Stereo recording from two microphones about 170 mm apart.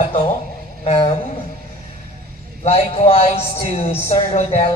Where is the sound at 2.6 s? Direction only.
35° left (ahead or behind).